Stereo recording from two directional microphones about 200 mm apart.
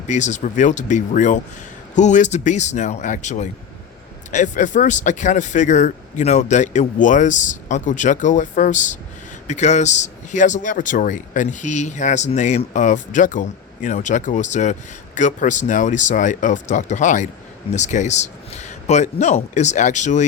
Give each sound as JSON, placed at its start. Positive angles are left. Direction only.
{"t": 0.1, "sound": "speech", "side_deg": 35}